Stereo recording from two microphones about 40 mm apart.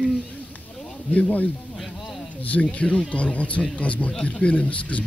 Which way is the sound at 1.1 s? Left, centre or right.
Left.